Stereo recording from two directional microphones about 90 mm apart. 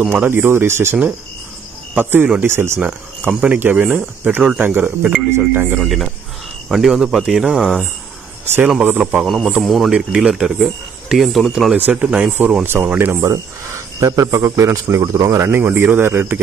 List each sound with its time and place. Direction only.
0.1 s speech: 25° right (ahead or behind)
2.0 s speech: 25° right (ahead or behind)
2.9 s speech: 10° right (ahead or behind)
5.8 s speech: centre (ahead or behind)
9.2 s speech: centre (ahead or behind)
11.7 s speech: 15° right (ahead or behind)
13.9 s a man's voice: 40° right (ahead or behind)